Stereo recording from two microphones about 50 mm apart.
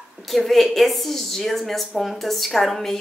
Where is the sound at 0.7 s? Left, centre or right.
Centre.